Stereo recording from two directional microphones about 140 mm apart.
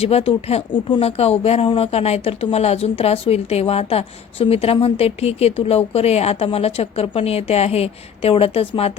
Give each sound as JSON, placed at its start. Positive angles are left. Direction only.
{"t": 0.0, "sound": "speech", "side_deg": 45}